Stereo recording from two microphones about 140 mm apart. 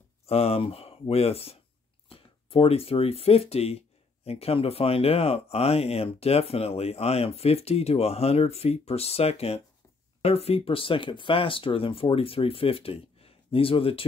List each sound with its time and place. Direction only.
0.3 s speech: 45° left (ahead or behind)